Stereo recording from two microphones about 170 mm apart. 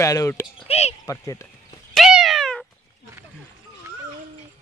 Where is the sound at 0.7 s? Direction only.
40° left (ahead or behind).